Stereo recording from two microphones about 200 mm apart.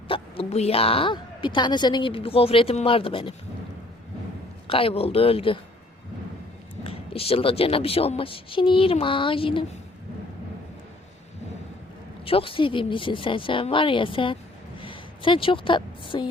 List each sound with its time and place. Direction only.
0.1 s speech: 30° left (ahead or behind)
4.7 s speech: 30° left (ahead or behind)
6.8 s speech: 30° left (ahead or behind)
12.2 s speech: 25° left (ahead or behind)